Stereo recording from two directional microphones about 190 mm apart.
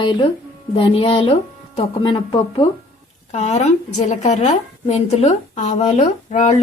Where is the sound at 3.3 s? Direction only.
35° left (ahead or behind).